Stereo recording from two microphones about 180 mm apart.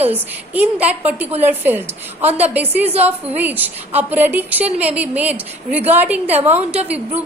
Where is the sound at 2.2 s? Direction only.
35° right (ahead or behind).